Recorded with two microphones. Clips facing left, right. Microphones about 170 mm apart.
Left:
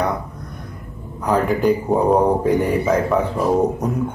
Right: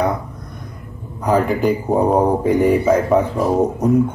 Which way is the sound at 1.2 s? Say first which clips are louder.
Right 1 dB; centre (ahead or behind).